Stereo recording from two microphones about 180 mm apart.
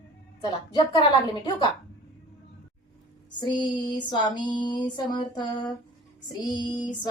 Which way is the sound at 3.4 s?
25° left (ahead or behind).